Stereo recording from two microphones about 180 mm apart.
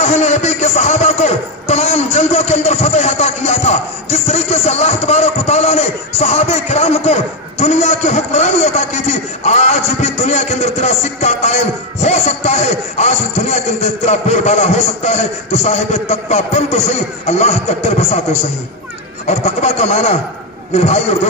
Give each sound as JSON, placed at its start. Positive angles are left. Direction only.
{"t": 0.0, "sound": "a man's voice", "side_deg": 40}